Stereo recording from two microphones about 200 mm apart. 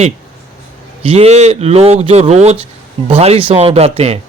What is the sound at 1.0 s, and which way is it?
A man's voice, 30° right (ahead or behind).